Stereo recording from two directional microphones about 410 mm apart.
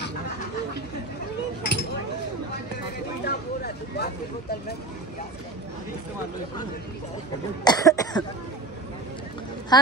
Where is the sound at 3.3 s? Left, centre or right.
Left.